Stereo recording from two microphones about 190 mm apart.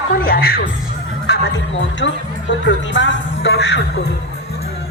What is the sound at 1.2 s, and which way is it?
Speech, 60° left (ahead or behind).